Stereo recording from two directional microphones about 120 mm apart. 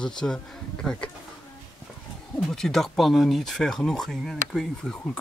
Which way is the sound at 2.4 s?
5° left (ahead or behind).